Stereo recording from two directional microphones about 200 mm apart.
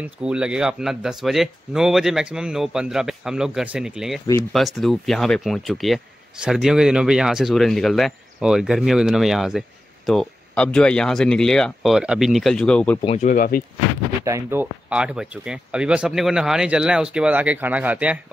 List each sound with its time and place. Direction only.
0.0 s speech: 5° right (ahead or behind)
13.0 s speech: 35° left (ahead or behind)
14.2 s speech: 15° right (ahead or behind)